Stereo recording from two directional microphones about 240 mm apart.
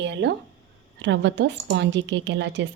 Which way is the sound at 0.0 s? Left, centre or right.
Right.